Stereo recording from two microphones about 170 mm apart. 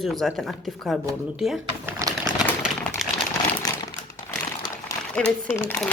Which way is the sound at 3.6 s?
20° left (ahead or behind).